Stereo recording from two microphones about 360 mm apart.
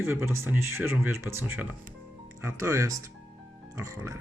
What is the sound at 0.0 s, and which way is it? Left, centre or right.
Speech, centre.